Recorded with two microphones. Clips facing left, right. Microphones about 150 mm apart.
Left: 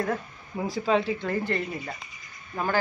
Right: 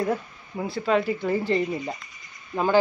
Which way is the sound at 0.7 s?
Centre (ahead or behind).